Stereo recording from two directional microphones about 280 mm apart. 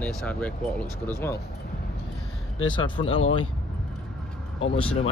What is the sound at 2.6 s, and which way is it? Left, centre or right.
Speech, centre.